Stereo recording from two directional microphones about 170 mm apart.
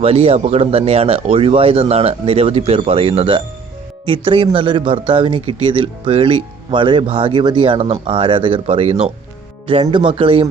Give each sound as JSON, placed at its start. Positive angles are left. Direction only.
{"t": 0.0, "sound": "a man's voice", "side_deg": -35}